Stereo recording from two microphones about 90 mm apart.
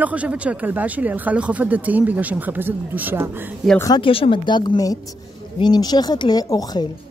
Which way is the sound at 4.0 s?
80° left.